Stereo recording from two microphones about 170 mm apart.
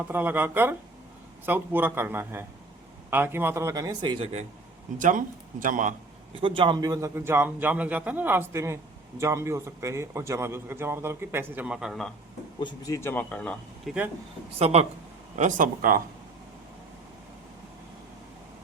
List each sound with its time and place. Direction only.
0.0 s a man's voice: 10° right (ahead or behind); by 4.3 s 25° right (ahead or behind)
4.9 s speech: 50° right (ahead or behind)
6.4 s a man's voice: 30° right (ahead or behind); by 12.1 s centre (ahead or behind)
12.5 s speech: 25° left (ahead or behind); by 13.9 s 5° left (ahead or behind)
14.6 s speech: 40° right (ahead or behind)
15.4 s speech: 50° right (ahead or behind)